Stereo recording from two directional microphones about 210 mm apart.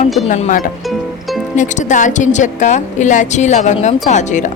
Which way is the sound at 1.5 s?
35° left (ahead or behind).